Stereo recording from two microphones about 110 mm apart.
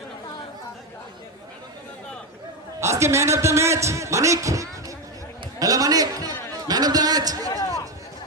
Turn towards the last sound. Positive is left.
turn(degrees=-35)  # may be behind; listen again after turning